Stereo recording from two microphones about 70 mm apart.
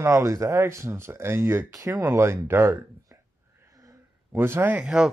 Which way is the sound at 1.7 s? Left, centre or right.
Right.